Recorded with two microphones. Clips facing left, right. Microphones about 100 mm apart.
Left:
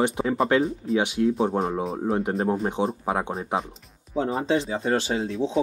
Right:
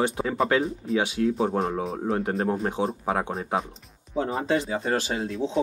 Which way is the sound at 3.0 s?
20° left (ahead or behind).